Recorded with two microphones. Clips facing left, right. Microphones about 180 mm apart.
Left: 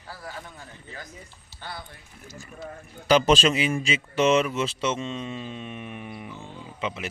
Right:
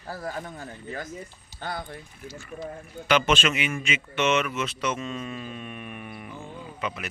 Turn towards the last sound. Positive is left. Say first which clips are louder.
# left 1 dB
turn(degrees=25)  # may be behind; listen again after turning